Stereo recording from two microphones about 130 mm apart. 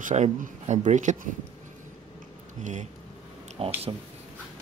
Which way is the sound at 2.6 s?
65° right (ahead or behind).